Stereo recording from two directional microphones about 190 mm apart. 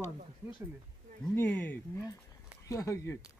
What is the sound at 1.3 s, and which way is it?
Speech, 10° left (ahead or behind).